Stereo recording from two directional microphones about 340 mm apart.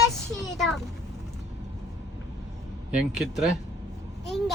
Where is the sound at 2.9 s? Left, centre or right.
Centre.